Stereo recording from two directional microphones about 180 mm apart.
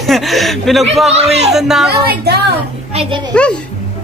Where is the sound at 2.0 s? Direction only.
65° right (ahead or behind).